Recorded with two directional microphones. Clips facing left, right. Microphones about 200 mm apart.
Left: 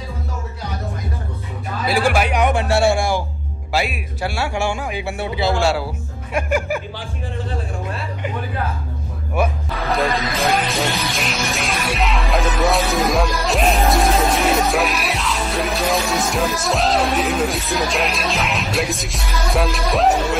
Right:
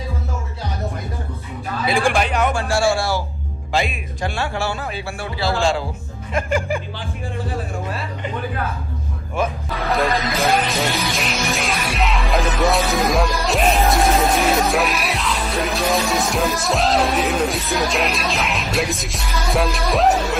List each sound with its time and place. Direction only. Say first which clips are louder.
1.9 s speech: left 1 dB; 5° left (ahead or behind)
3.7 s speech: even; 5° left (ahead or behind)
5.6 s speech: left 1 dB; 10° left (ahead or behind)
9.7 s music: even; centre (ahead or behind)